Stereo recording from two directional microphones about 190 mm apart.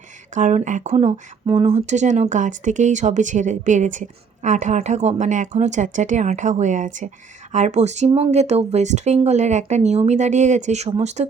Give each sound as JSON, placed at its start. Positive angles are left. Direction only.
{"t": 0.3, "sound": "speech", "side_deg": -40}